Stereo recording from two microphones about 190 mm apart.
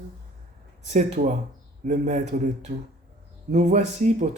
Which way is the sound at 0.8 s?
40° right (ahead or behind).